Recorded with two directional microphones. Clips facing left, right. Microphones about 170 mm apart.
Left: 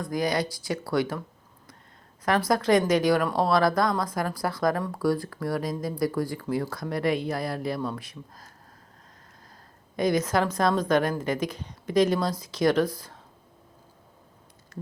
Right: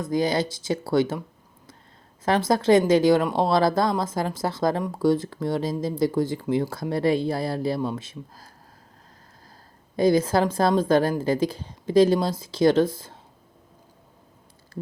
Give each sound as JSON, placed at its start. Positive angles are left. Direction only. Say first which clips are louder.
{"t": 0.0, "sound": "speech", "louder": "right 3 dB", "side_deg": -25}
{"t": 2.2, "sound": "speech", "louder": "right 3 dB", "side_deg": -25}
{"t": 9.9, "sound": "speech", "louder": "right 4 dB", "side_deg": -30}